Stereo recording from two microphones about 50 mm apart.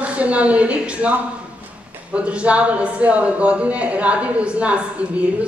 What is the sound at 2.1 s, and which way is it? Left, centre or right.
Speech, right.